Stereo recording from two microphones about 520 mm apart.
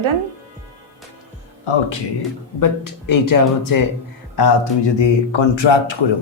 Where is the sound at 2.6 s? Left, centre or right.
Left.